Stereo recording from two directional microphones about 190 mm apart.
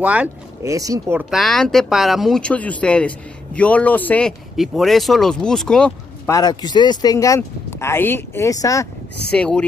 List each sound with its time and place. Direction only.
0.0 s speech: 5° right (ahead or behind)
0.7 s speech: 15° right (ahead or behind)
1.3 s speech: centre (ahead or behind)
6.3 s speech: 20° left (ahead or behind)
9.3 s speech: 5° left (ahead or behind)